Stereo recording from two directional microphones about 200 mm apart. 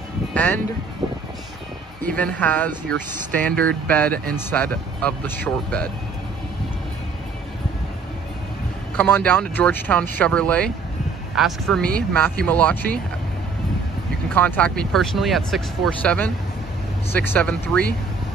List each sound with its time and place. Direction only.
0.3 s speech: 5° left (ahead or behind)
1.0 s music: 20° right (ahead or behind)
2.0 s speech: 5° left (ahead or behind)
8.9 s speech: 10° left (ahead or behind)
14.3 s speech: 5° left (ahead or behind)